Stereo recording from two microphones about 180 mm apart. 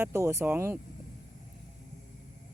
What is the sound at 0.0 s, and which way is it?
Speech, 15° right (ahead or behind).